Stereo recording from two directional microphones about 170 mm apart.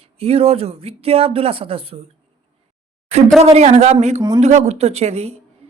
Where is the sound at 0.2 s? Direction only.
35° right (ahead or behind).